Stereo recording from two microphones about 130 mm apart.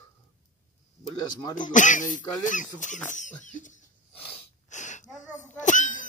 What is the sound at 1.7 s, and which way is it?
Speech, 75° left (ahead or behind).